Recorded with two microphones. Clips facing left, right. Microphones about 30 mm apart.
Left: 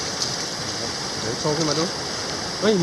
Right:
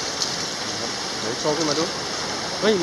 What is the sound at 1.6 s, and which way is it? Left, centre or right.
Speech, centre.